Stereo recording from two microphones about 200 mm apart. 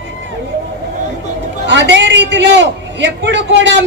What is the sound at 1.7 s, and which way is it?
A man's voice, 60° right (ahead or behind).